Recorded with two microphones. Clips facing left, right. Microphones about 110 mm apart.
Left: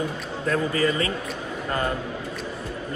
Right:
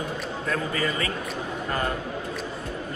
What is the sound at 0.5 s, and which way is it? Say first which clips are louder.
Speech: left 5 dB; 30° left (ahead or behind).